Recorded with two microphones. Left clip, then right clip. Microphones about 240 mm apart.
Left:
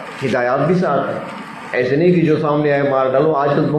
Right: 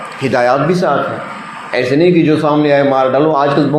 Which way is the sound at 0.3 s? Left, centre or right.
Right.